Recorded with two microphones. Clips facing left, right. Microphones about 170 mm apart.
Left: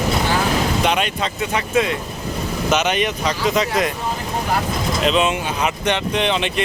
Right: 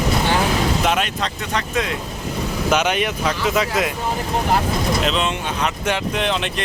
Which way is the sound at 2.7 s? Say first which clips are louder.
Even; 10° right (ahead or behind).